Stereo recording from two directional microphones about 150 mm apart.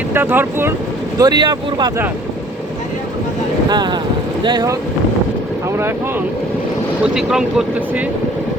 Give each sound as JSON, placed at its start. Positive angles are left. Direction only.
{"t": 0.1, "sound": "speech", "side_deg": -15}
{"t": 1.2, "sound": "speech", "side_deg": -30}
{"t": 3.7, "sound": "speech", "side_deg": -30}
{"t": 7.0, "sound": "speech", "side_deg": -5}